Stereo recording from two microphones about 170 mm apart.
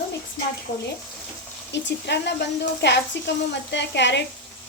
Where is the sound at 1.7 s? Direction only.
90° left.